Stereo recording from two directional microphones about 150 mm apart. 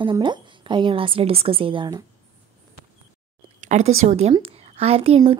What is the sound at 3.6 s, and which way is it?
A woman's voice, 50° right (ahead or behind).